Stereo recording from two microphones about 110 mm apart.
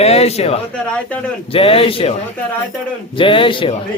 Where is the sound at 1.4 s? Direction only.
60° left (ahead or behind).